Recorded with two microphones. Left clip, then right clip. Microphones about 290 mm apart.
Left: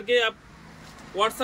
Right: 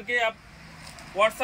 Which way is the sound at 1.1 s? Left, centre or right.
Centre.